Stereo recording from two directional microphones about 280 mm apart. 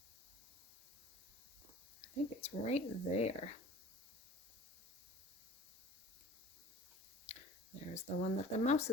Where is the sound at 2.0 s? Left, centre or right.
Left.